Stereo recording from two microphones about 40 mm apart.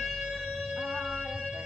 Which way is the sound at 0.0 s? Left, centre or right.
Centre.